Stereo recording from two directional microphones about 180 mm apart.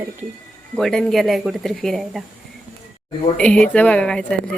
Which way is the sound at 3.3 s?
5° left (ahead or behind).